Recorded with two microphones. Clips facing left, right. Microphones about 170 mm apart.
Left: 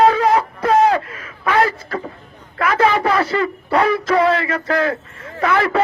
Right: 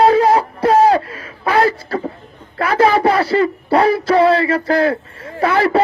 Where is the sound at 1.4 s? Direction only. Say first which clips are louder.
Right 2 dB; 35° right (ahead or behind).